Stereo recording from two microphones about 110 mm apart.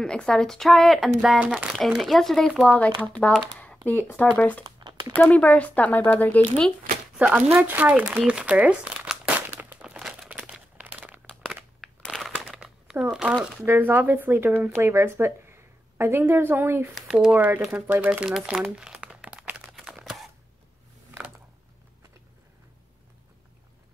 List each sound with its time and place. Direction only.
0.0 s a woman's voice: 5° left (ahead or behind)
2.8 s speech: 15° left (ahead or behind)
4.6 s crumpling: 40° right (ahead or behind)
5.1 s speech: 10° left (ahead or behind)
7.2 s speech: 10° right (ahead or behind)
7.5 s crumpling: 15° right (ahead or behind)
11.4 s crunch: centre (ahead or behind)
12.3 s crumpling: 10° right (ahead or behind)
13.7 s a woman's voice: 20° right (ahead or behind)
16.9 s speech: 5° right (ahead or behind)
17.9 s crumpling: 10° right (ahead or behind)